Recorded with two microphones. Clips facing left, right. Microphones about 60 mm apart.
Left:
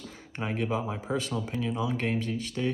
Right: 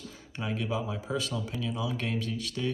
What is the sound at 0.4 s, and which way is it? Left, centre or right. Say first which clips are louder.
Speech: left 2 dB; left.